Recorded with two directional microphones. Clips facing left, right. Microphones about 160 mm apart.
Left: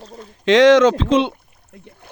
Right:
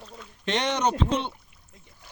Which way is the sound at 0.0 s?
35° left (ahead or behind).